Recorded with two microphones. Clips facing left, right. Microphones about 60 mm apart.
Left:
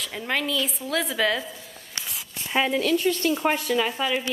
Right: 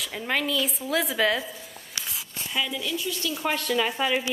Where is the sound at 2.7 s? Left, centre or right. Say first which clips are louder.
Left 8 dB; left.